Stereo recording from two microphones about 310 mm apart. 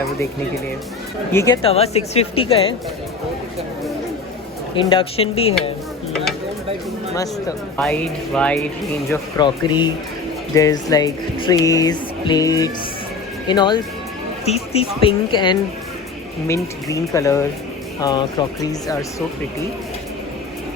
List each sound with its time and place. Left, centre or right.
1.3 s speech: centre
4.7 s speech: centre
7.8 s speech: centre
9.4 s speech: centre